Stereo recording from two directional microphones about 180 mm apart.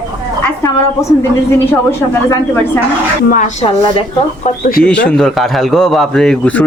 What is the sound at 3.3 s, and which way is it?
Speech, 40° left (ahead or behind).